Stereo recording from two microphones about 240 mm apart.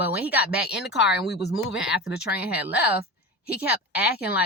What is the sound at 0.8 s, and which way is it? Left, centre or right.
Speech, left.